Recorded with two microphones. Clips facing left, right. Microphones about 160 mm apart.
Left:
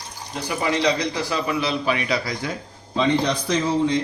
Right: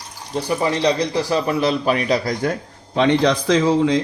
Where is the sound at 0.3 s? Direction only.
35° right (ahead or behind); by 4.0 s 90° right.